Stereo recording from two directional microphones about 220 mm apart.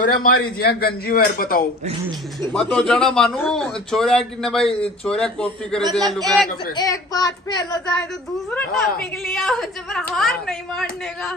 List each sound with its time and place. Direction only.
0.0 s a man's voice: 40° left (ahead or behind)
2.5 s a man's voice: 5° left (ahead or behind)
6.0 s a man's voice: 15° right (ahead or behind)
6.8 s a child's voice: 15° left (ahead or behind)
8.0 s a man's voice: 5° left (ahead or behind)